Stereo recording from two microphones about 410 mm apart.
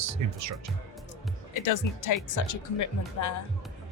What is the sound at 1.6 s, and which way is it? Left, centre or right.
Speech, left.